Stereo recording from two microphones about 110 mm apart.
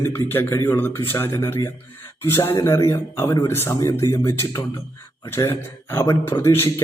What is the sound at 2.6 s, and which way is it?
A man's voice, 25° left (ahead or behind).